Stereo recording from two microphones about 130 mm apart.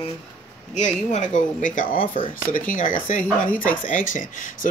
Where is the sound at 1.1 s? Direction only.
70° left (ahead or behind).